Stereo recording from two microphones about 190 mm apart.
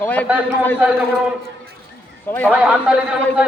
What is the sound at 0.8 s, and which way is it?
Speech, 5° right (ahead or behind).